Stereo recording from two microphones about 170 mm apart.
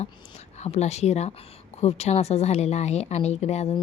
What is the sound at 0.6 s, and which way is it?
A woman's voice, 40° left (ahead or behind).